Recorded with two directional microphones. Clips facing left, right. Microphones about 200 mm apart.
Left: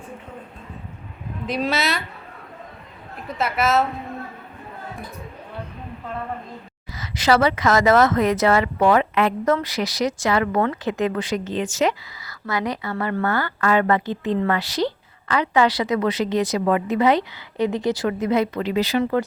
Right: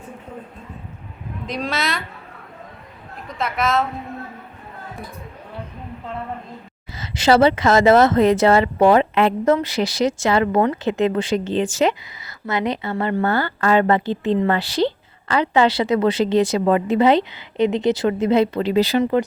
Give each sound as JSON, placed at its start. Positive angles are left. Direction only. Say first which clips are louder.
{"t": 1.5, "sound": "speech", "louder": "left 2 dB", "side_deg": 5}
{"t": 3.2, "sound": "speech", "louder": "left 1 dB", "side_deg": 5}
{"t": 6.9, "sound": "speech", "louder": "right 3 dB", "side_deg": -25}